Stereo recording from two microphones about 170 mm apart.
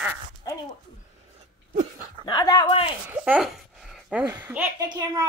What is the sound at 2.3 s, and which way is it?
Speech, 25° left (ahead or behind).